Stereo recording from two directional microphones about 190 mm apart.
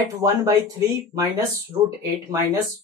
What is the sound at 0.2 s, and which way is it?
Speech, 15° right (ahead or behind).